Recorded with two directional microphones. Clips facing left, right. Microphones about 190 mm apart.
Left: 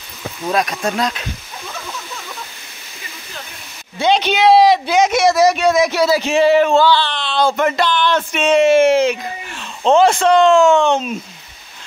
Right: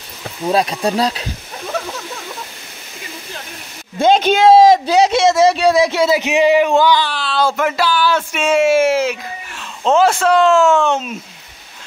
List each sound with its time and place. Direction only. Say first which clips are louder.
0.4 s speech: right 3 dB; 30° right (ahead or behind)
4.0 s speech: right 3 dB; 50° right (ahead or behind); by 11.1 s 5° right (ahead or behind)